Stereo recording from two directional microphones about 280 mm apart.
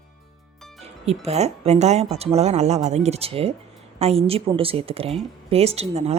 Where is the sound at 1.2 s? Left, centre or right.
Right.